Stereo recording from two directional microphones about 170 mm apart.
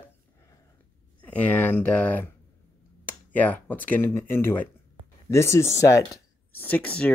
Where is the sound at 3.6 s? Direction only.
10° left (ahead or behind).